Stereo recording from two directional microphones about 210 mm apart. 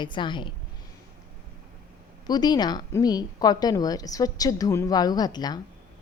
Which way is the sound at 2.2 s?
20° left (ahead or behind).